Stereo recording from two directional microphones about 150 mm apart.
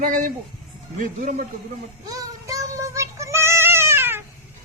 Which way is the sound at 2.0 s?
25° right (ahead or behind).